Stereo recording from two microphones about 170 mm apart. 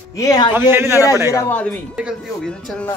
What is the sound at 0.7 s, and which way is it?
Speech, 15° right (ahead or behind).